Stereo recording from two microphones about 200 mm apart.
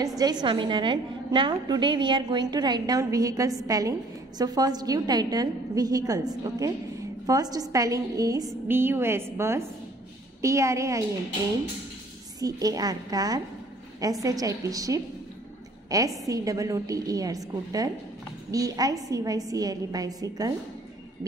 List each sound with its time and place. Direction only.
0.2 s a woman's voice: 20° right (ahead or behind)
12.4 s a woman's voice: 20° right (ahead or behind)